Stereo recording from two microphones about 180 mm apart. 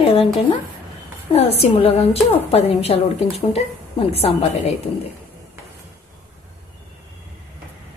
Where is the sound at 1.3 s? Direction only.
35° left (ahead or behind).